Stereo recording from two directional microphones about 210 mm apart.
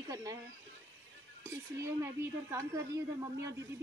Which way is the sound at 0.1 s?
15° right (ahead or behind).